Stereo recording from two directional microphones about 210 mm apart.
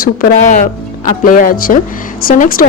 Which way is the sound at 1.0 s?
40° left (ahead or behind).